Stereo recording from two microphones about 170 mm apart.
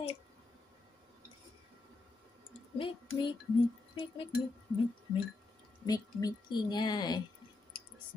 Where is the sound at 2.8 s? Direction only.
30° left (ahead or behind).